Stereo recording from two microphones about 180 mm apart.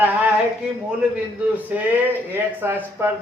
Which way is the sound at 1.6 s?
10° right (ahead or behind).